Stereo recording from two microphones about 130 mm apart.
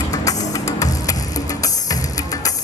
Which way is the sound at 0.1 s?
25° left (ahead or behind).